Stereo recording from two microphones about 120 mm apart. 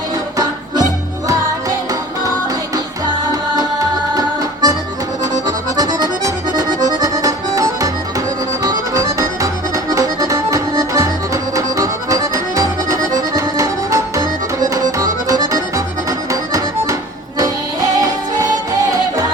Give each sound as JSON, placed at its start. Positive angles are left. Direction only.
{"t": 4.1, "sound": "accordion", "side_deg": -30}
{"t": 17.9, "sound": "music", "side_deg": -30}